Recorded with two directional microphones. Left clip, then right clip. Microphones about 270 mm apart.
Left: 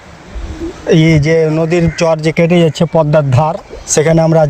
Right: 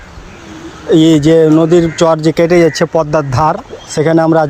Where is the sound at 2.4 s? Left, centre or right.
Left.